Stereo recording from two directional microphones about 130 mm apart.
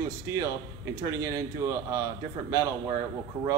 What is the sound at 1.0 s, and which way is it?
Speech, 25° right (ahead or behind).